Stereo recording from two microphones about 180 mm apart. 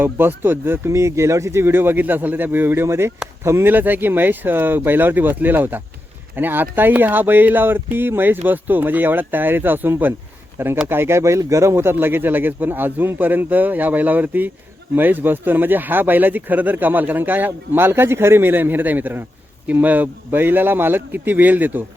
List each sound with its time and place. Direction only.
0.0 s speech: 10° right (ahead or behind)